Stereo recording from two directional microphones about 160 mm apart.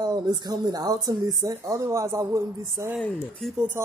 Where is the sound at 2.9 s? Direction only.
Centre (ahead or behind).